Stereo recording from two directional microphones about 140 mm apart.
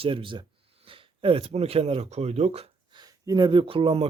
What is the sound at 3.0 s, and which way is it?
Speech, 30° right (ahead or behind).